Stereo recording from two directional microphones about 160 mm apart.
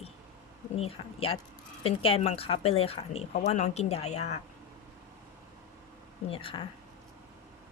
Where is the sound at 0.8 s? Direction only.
35° left (ahead or behind).